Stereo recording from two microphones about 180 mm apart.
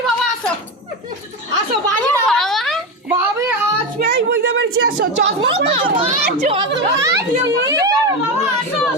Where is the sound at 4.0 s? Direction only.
65° right (ahead or behind).